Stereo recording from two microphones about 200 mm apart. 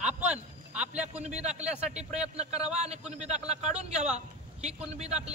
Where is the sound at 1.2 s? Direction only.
35° right (ahead or behind).